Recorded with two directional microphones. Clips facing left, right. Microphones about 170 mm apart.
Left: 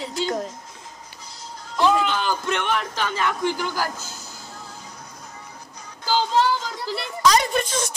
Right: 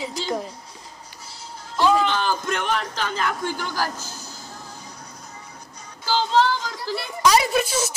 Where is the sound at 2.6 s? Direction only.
35° right (ahead or behind).